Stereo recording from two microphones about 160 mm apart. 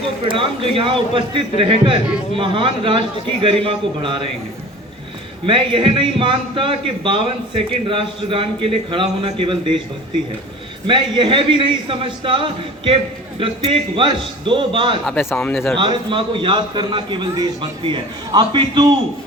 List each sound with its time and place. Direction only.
0.3 s a man's voice: 35° right (ahead or behind)
5.5 s a man's voice: 30° right (ahead or behind)
10.8 s a man's voice: 30° right (ahead or behind)
15.0 s a man's voice: 10° left (ahead or behind)
15.8 s a man's voice: 30° right (ahead or behind)